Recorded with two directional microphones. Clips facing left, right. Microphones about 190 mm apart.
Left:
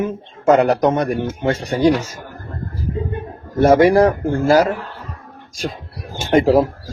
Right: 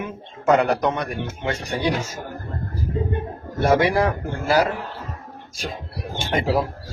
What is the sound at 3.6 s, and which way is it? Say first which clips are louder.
Speech: left 7 dB; 45° left (ahead or behind).